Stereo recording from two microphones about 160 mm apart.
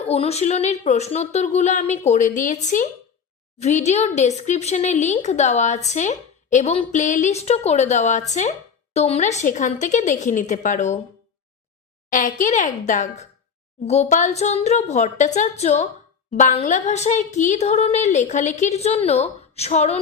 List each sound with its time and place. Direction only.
0.0 s a woman's voice: 40° left (ahead or behind)
12.1 s a woman's voice: 55° left (ahead or behind)
16.3 s a woman's voice: 55° left (ahead or behind)